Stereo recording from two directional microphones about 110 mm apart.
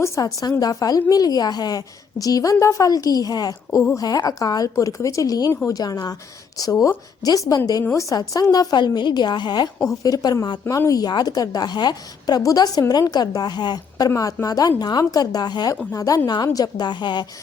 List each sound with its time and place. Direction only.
0.0 s a woman's voice: 30° left (ahead or behind)